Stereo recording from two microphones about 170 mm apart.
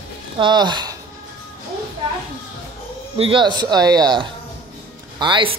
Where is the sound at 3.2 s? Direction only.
30° right (ahead or behind).